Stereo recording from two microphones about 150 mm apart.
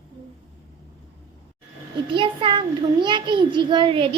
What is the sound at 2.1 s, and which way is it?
A child's voice, 35° right (ahead or behind).